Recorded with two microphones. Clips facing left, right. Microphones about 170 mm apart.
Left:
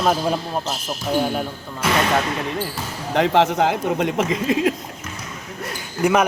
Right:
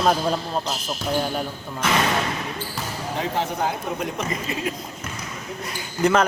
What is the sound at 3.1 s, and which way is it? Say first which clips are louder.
Speech: left 9 dB; 85° left.